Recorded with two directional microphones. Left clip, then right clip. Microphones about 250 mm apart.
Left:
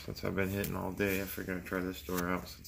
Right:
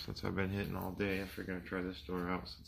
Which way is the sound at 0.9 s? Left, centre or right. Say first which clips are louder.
Left 4 dB; centre.